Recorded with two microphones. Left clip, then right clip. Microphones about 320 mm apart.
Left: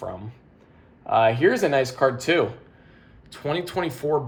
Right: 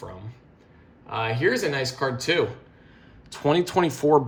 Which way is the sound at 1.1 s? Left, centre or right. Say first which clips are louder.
Left 6 dB; centre.